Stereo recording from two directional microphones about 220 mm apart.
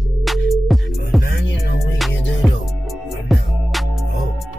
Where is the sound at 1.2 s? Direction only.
50° left (ahead or behind).